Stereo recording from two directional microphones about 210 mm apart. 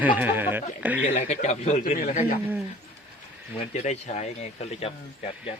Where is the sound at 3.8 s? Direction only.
35° left (ahead or behind).